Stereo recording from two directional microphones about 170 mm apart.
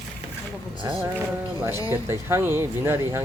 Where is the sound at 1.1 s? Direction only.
15° right (ahead or behind).